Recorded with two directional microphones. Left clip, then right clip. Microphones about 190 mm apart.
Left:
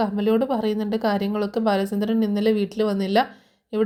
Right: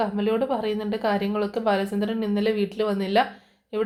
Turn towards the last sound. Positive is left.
turn(degrees=45)  # may be behind; listen again after turning